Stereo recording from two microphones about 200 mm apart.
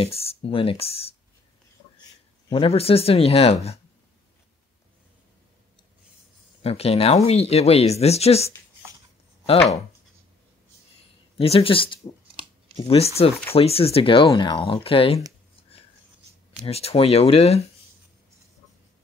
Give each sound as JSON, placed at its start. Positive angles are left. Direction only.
{"t": 0.0, "sound": "speech", "side_deg": 30}
{"t": 2.5, "sound": "speech", "side_deg": 30}
{"t": 6.6, "sound": "speech", "side_deg": 30}
{"t": 11.3, "sound": "speech", "side_deg": 30}
{"t": 16.6, "sound": "speech", "side_deg": 30}